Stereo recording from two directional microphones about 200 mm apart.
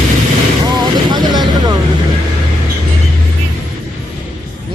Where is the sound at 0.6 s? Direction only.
20° right (ahead or behind).